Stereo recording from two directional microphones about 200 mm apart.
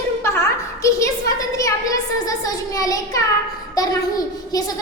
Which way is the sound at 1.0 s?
15° left (ahead or behind).